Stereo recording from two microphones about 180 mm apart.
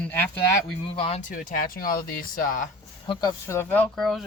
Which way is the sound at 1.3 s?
50° left (ahead or behind).